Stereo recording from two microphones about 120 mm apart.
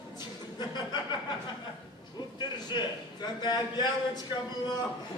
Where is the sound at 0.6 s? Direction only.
40° left (ahead or behind).